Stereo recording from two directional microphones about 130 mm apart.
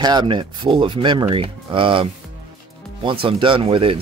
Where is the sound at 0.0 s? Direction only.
35° right (ahead or behind).